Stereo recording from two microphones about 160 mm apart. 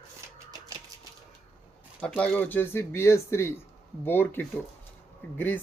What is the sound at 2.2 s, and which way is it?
Speech, 10° left (ahead or behind).